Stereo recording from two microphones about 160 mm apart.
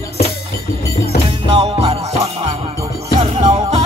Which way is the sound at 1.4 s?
40° right (ahead or behind).